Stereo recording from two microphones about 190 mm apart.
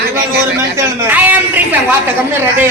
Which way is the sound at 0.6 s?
15° right (ahead or behind).